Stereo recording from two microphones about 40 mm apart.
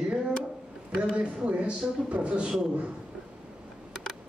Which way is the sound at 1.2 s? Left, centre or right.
Right.